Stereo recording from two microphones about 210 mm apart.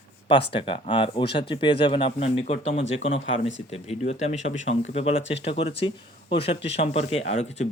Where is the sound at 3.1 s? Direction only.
65° left (ahead or behind).